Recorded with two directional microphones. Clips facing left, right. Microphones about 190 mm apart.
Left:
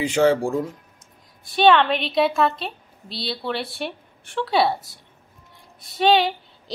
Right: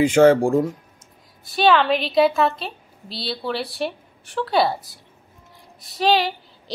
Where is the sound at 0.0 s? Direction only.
50° right (ahead or behind).